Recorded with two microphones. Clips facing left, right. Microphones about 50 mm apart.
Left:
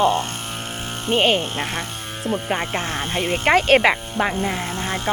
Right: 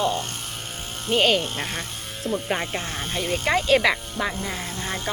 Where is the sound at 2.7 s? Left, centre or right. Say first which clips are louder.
Left 5 dB; left.